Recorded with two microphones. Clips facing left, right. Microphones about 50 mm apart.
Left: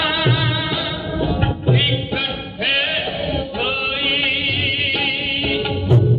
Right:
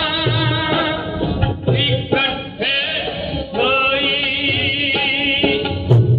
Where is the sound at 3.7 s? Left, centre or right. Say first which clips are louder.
Right 9 dB; right.